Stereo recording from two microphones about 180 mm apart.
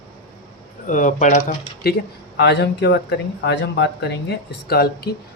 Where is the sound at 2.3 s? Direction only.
70° left (ahead or behind).